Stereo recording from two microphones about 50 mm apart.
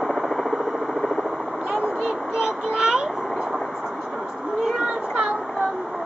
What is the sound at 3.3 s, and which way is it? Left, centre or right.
Vehicle, centre.